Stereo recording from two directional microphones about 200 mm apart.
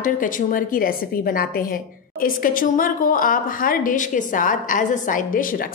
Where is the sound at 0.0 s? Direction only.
40° left (ahead or behind).